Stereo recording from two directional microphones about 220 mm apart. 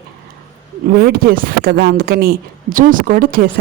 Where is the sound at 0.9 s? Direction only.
45° right (ahead or behind).